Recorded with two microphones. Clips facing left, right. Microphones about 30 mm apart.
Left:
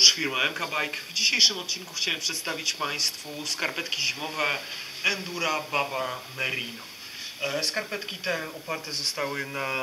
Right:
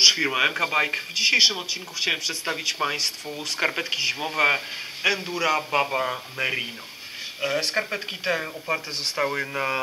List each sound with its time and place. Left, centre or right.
0.0 s speech: centre